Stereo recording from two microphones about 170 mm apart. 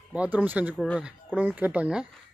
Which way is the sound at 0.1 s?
10° right (ahead or behind).